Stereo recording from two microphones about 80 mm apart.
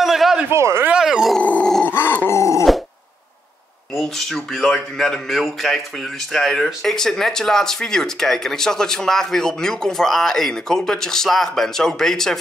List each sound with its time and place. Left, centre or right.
0.0 s a sound: centre
0.5 s speech: right
0.9 s groan: centre
1.4 s dog: centre
2.0 s grunt: left
2.3 s a sound: left
3.9 s speech: centre